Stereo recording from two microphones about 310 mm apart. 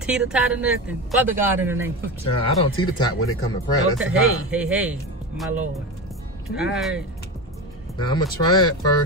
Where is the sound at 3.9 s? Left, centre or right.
Centre.